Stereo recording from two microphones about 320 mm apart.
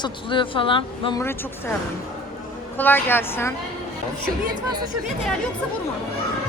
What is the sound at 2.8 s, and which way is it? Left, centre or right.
Speech, centre.